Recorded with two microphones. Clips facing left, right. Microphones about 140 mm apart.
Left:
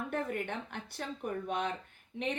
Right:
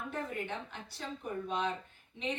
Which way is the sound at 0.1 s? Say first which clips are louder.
Left 2 dB; 55° left (ahead or behind).